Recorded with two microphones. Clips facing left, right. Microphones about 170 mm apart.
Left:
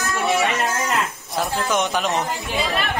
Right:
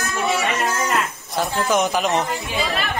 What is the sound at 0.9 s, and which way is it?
Speech, centre (ahead or behind).